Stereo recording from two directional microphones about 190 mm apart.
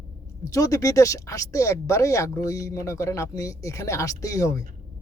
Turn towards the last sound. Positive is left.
turn(degrees=15)  # may be behind; listen again after turning